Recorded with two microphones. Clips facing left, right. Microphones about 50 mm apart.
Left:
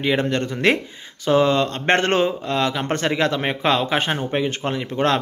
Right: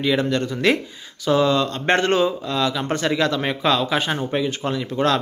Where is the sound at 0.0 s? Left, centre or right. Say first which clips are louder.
Even; left.